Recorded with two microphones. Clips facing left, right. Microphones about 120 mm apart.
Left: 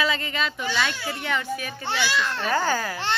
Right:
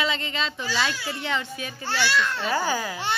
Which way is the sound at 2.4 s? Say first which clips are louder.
Left 1 dB; 15° right (ahead or behind).